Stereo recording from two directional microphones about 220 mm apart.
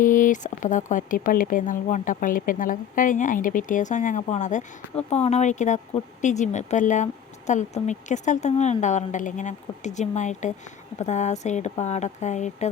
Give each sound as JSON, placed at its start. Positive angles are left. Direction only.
{"t": 0.0, "sound": "speech", "side_deg": 35}